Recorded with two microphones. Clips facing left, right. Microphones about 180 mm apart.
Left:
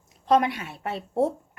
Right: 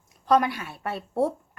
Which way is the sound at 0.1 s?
25° left (ahead or behind).